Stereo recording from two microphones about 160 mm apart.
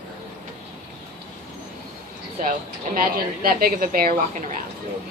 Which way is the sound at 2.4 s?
60° right (ahead or behind).